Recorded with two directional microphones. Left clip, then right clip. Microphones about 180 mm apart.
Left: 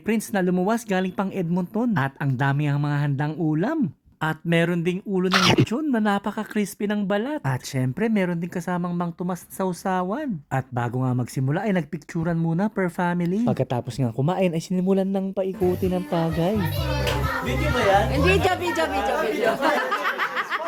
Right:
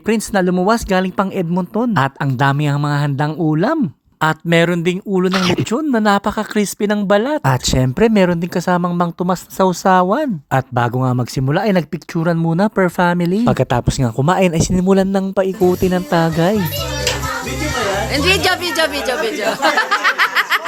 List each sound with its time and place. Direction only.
0.1 s speech: 30° right (ahead or behind)
5.3 s speech: centre (ahead or behind)
5.7 s speech: 30° right (ahead or behind)
13.4 s speech: 55° right (ahead or behind)
18.1 s speech: 25° right (ahead or behind)
19.8 s a sound: 25° right (ahead or behind)